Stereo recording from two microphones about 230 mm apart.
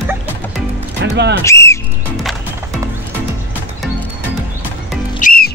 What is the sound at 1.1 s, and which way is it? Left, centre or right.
Speech, right.